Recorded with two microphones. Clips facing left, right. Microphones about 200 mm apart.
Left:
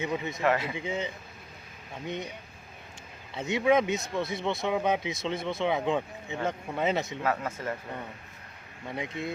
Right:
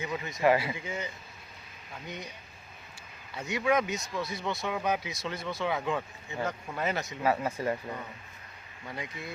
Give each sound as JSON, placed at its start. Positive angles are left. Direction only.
{"t": 0.0, "sound": "speech", "side_deg": 25}
{"t": 0.4, "sound": "speech", "side_deg": -10}
{"t": 0.8, "sound": "speech", "side_deg": 25}
{"t": 3.3, "sound": "speech", "side_deg": 25}
{"t": 7.2, "sound": "speech", "side_deg": -10}
{"t": 8.9, "sound": "speech", "side_deg": 25}